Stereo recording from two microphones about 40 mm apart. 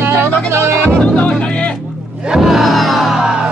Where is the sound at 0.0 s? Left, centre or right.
Right.